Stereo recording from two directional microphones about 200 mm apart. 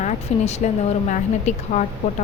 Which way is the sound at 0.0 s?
35° left (ahead or behind).